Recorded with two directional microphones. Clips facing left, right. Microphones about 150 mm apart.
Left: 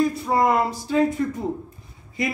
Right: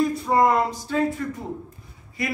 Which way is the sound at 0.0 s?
Centre (ahead or behind).